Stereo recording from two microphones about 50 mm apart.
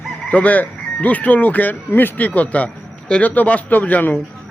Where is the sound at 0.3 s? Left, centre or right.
Left.